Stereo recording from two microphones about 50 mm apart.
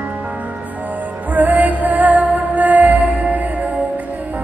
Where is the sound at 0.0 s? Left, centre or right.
Right.